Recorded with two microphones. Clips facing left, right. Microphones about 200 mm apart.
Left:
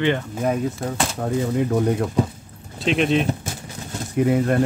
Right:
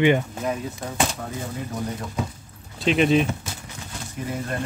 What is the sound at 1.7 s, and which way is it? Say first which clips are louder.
Speech: left 10 dB; 60° left (ahead or behind).